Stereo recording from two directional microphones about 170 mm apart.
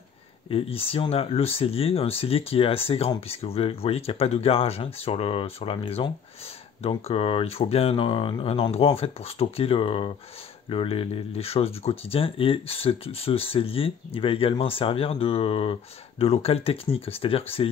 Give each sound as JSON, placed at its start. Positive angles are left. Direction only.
{"t": 0.5, "sound": "speech", "side_deg": 35}